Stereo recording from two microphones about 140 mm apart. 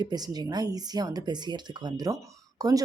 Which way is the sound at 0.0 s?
30° right (ahead or behind).